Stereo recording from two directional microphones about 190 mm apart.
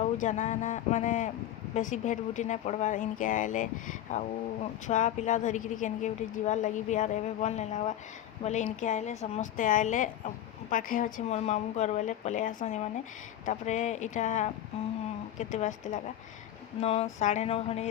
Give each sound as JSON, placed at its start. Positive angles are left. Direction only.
{"t": 0.0, "sound": "a woman's voice", "side_deg": 40}